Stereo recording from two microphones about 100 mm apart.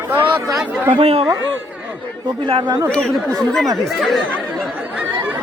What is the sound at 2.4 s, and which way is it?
Speech, 50° right (ahead or behind).